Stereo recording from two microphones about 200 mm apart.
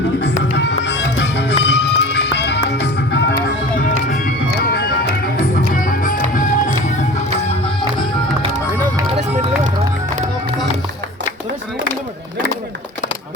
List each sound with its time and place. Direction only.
0.5 s music: 60° left (ahead or behind)
5.4 s music: 45° left (ahead or behind)